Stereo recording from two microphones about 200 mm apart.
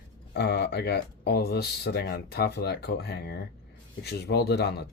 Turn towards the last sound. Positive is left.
turn(degrees=55)  # may be behind; listen again after turning